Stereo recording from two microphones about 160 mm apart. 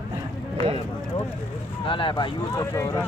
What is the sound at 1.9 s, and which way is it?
Speech, 30° left (ahead or behind).